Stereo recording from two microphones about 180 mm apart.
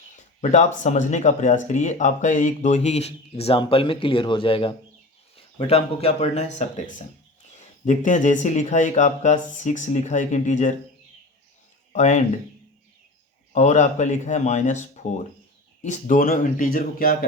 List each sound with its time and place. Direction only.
0.5 s speech: 40° left (ahead or behind)
11.9 s speech: 40° left (ahead or behind)
13.5 s speech: 40° left (ahead or behind)